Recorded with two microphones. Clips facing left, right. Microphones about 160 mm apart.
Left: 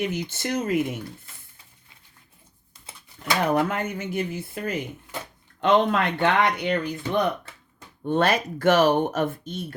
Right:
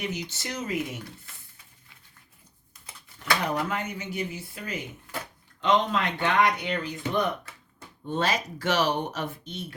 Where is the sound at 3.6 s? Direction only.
50° left (ahead or behind).